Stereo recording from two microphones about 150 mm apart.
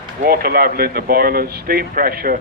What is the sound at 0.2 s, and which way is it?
A man's voice, 85° right.